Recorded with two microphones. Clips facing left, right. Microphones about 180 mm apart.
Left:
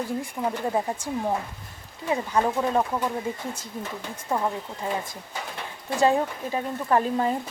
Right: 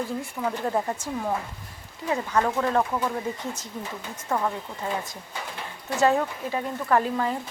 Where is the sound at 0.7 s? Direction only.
10° left (ahead or behind).